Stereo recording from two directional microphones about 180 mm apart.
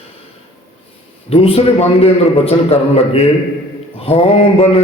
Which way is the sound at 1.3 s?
30° left (ahead or behind).